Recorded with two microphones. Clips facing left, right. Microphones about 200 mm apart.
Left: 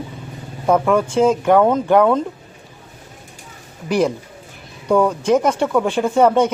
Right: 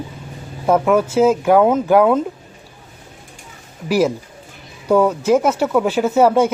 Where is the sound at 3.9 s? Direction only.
5° right (ahead or behind).